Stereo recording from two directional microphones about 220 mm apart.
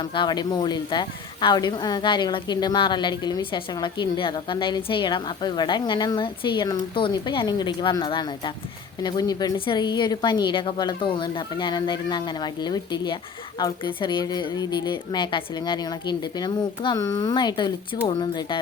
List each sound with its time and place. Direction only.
0.0 s a woman's voice: 20° left (ahead or behind)